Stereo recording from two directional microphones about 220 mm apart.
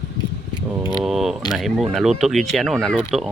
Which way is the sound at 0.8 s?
20° left (ahead or behind).